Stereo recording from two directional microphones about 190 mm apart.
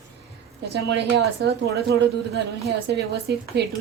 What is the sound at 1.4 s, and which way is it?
A woman's voice, 60° right (ahead or behind).